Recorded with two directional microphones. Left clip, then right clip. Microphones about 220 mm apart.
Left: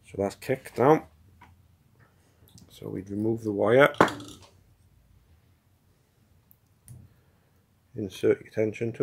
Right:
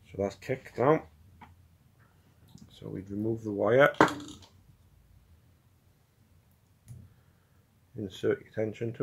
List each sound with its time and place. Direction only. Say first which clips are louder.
0.0 s speech: left 3 dB; 35° left (ahead or behind)
2.5 s speech: left 5 dB; 30° left (ahead or behind)
8.0 s speech: left 5 dB; 30° left (ahead or behind)